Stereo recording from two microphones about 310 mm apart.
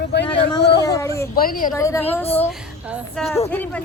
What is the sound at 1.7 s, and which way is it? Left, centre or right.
A child's voice, centre.